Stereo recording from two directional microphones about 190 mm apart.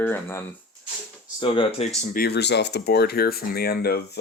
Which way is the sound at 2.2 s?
60° left (ahead or behind).